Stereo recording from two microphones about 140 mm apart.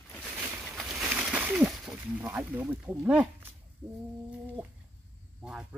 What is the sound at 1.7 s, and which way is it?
Snake, 10° right (ahead or behind).